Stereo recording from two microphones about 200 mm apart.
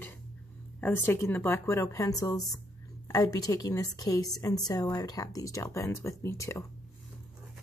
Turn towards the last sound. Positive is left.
turn(degrees=15)  # may be behind; listen again after turning